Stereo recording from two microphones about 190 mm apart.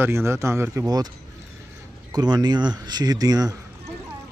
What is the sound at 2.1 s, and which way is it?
Speech, 20° right (ahead or behind).